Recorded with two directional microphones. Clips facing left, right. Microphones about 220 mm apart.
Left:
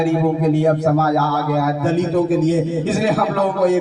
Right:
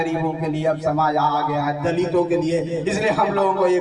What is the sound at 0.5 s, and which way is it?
Speech, 45° left (ahead or behind).